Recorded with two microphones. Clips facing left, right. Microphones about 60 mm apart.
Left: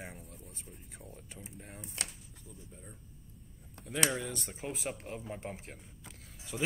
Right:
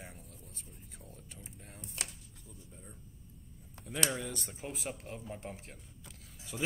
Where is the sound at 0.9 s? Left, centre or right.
Centre.